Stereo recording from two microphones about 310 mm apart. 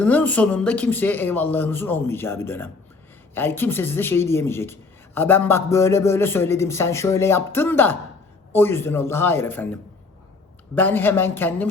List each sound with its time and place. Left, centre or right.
0.0 s speech: centre
10.8 s speech: centre